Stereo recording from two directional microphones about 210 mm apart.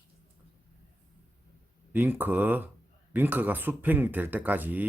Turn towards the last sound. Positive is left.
turn(degrees=-10)  # may be behind; listen again after turning